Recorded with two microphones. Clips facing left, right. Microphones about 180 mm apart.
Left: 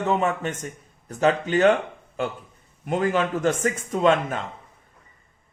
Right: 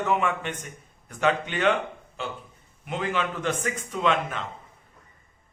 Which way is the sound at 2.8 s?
45° left (ahead or behind).